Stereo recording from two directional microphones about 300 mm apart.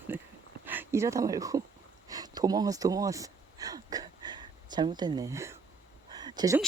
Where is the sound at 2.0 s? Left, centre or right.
Centre.